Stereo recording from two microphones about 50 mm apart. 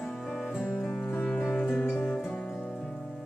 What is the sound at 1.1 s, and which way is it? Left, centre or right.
Music, left.